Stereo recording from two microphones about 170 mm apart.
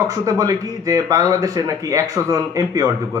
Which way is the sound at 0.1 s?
20° right (ahead or behind).